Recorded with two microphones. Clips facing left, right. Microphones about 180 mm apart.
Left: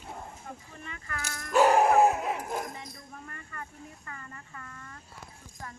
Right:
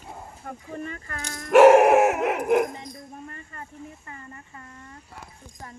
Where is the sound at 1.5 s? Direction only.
85° right.